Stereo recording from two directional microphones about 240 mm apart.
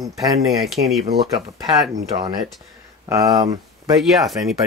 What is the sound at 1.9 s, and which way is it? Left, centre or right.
Speech, centre.